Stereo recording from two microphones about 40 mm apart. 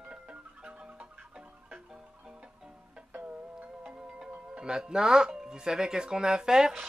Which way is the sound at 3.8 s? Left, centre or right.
Right.